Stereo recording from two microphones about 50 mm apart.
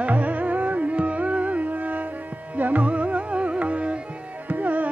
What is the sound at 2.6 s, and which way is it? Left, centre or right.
Carnatic music, right.